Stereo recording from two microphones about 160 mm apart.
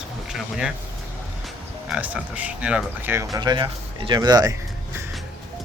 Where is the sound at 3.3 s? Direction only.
25° right (ahead or behind).